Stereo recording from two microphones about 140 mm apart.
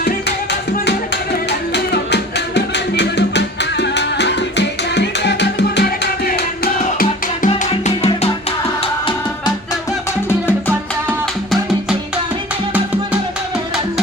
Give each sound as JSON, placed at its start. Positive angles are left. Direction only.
{"t": 6.7, "sound": "music", "side_deg": 70}
{"t": 7.7, "sound": "music", "side_deg": 50}
{"t": 10.2, "sound": "music", "side_deg": 15}